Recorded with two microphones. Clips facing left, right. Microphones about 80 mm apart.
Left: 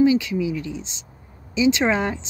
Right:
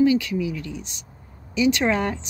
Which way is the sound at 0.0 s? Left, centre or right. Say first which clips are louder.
Left 1 dB; centre.